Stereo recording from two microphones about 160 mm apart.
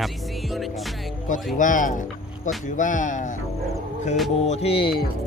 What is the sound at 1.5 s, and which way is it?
Speech, 55° left (ahead or behind).